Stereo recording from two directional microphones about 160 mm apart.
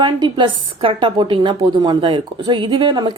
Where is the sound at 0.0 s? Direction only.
30° right (ahead or behind).